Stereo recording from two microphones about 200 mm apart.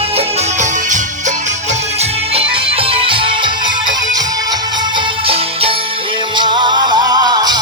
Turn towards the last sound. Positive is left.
turn(degrees=-20)  # may be behind; listen again after turning